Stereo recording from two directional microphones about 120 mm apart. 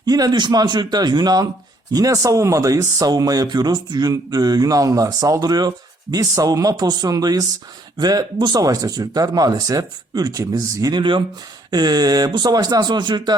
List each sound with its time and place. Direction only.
0.0 s speech: 30° right (ahead or behind)